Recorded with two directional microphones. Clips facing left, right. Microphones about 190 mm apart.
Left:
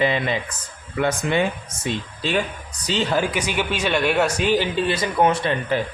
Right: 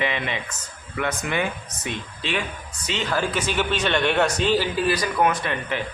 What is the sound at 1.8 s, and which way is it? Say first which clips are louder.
A man's voice: left 4 dB; 40° left (ahead or behind).